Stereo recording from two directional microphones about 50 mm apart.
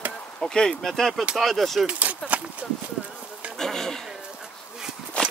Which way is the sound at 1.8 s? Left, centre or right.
Right.